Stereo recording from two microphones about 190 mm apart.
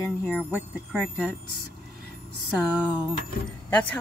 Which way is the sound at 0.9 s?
Centre (ahead or behind).